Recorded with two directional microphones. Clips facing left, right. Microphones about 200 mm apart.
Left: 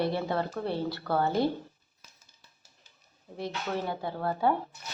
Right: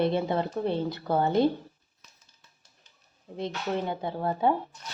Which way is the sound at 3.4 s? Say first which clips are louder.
Right 3 dB; 20° right (ahead or behind).